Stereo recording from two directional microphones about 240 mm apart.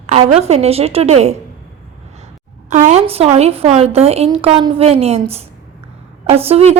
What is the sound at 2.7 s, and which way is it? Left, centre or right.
A woman's voice, right.